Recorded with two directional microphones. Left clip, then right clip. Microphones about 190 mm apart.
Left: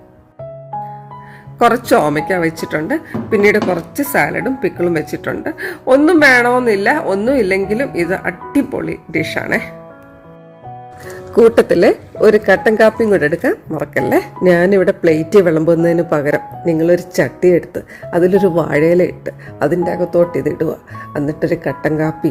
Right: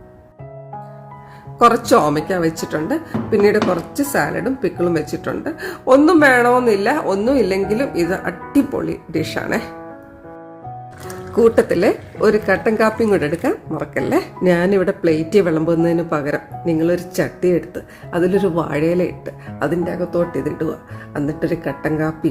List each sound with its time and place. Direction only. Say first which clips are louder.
1.5 s a woman's voice: left 1 dB; 10° left (ahead or behind)
11.3 s speech: left 4 dB; 20° left (ahead or behind)